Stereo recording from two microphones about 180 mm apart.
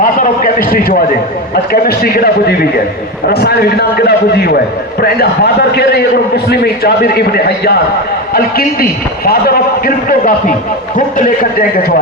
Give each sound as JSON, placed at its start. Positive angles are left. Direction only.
{"t": 0.0, "sound": "a man's voice", "side_deg": 50}